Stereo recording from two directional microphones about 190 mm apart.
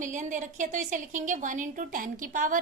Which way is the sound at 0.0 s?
40° right (ahead or behind).